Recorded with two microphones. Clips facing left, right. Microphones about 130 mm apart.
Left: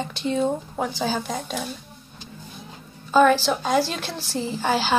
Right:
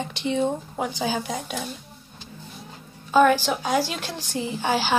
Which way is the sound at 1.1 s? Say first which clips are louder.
Left 1 dB; 10° right (ahead or behind).